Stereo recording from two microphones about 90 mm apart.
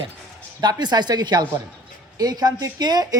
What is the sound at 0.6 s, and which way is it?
A woman's voice, 50° right (ahead or behind).